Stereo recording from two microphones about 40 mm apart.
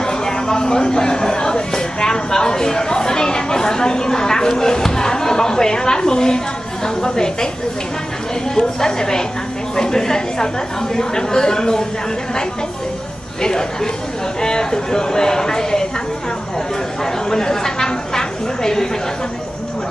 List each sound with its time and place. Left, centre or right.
0.0 s a woman's voice: centre
8.5 s speech: centre
13.4 s speech: centre
17.0 s speech: centre